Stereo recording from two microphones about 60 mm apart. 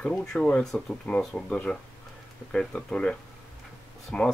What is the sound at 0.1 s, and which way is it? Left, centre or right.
Speech, centre.